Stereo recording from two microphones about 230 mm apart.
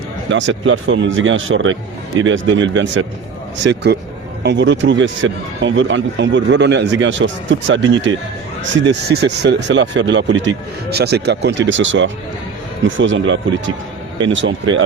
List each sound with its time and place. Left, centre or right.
0.3 s a man's voice: right